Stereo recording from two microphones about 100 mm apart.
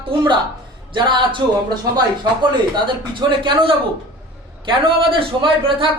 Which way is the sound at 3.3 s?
55° right (ahead or behind).